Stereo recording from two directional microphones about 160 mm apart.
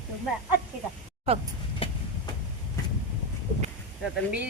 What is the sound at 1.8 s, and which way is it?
Train, 35° left (ahead or behind).